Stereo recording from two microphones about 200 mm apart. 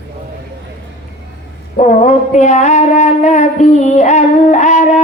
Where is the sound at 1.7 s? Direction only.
35° left (ahead or behind).